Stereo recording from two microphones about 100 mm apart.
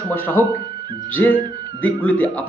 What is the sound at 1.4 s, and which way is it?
Music, 45° right (ahead or behind).